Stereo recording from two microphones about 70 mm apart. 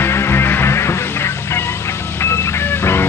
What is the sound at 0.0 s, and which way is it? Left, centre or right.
Music, left.